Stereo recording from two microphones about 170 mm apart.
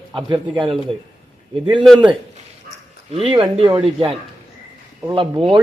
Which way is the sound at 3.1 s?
30° right (ahead or behind).